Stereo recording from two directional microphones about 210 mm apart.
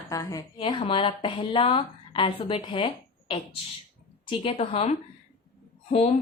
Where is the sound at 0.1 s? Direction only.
15° left (ahead or behind).